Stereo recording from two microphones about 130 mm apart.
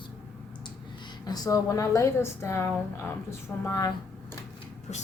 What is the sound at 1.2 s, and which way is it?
A woman's voice, 30° left (ahead or behind).